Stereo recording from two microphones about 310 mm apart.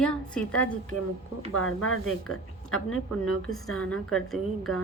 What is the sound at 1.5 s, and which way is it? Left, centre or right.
Speech, left.